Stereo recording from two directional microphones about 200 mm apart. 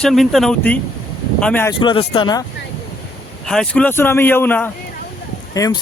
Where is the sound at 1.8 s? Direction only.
25° left (ahead or behind).